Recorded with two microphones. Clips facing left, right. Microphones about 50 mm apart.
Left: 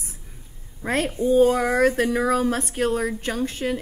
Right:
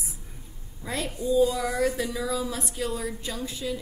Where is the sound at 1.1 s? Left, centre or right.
Left.